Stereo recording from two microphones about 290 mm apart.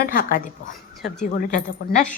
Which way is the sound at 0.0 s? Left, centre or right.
Left.